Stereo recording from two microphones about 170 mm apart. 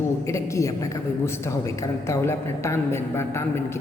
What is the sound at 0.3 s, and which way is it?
A woman's voice, 15° left (ahead or behind).